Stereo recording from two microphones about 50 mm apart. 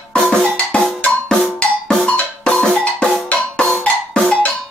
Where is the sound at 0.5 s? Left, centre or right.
Left.